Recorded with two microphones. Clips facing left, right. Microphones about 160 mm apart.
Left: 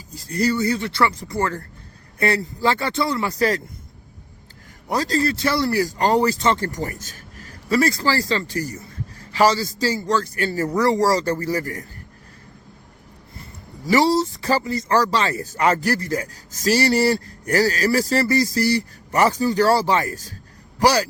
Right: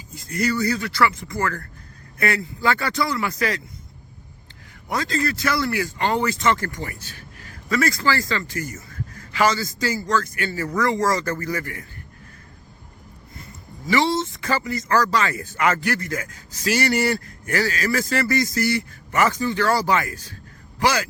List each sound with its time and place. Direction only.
0.1 s speech: 35° left (ahead or behind)
4.9 s speech: 35° left (ahead or behind)
13.8 s speech: 40° left (ahead or behind)